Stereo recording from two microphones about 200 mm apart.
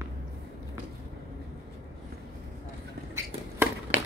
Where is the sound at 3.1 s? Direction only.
10° right (ahead or behind).